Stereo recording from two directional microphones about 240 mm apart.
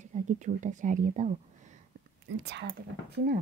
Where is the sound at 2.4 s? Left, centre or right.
Right.